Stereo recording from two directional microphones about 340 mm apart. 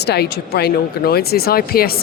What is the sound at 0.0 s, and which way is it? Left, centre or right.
Speech, left.